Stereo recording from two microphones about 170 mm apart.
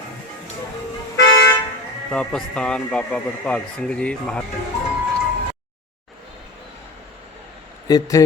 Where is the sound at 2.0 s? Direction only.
5° left (ahead or behind).